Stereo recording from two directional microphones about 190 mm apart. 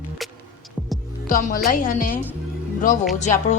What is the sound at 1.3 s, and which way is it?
Speech, 45° left (ahead or behind).